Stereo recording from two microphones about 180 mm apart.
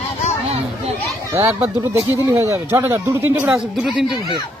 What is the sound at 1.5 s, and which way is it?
Speech, 15° right (ahead or behind).